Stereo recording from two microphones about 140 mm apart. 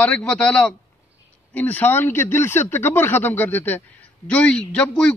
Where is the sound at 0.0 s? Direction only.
10° left (ahead or behind).